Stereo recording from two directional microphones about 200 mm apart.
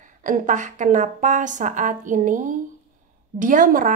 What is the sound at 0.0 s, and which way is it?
A woman's voice, 40° right (ahead or behind).